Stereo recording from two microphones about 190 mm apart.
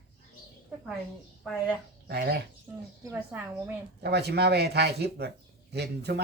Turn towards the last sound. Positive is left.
turn(degrees=-60)  # may be behind; listen again after turning